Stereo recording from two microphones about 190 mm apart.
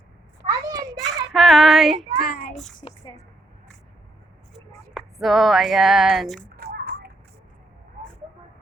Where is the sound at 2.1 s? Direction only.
55° left (ahead or behind).